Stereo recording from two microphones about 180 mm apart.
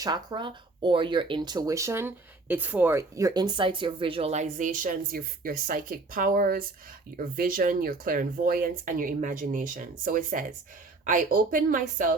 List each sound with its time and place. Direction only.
0.0 s speech: 20° right (ahead or behind); by 12.1 s 50° right (ahead or behind)